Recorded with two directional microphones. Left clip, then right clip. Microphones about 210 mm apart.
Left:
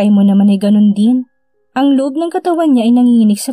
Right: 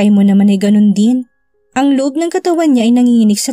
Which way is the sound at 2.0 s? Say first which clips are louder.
Right 1 dB; 25° right (ahead or behind).